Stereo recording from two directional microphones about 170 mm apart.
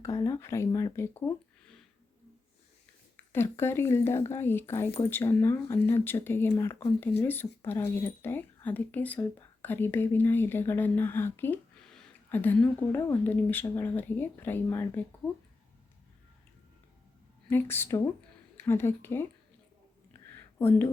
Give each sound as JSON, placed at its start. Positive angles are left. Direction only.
{"t": 0.0, "sound": "speech", "side_deg": 20}
{"t": 3.3, "sound": "speech", "side_deg": 15}
{"t": 17.5, "sound": "speech", "side_deg": 15}
{"t": 20.6, "sound": "speech", "side_deg": 15}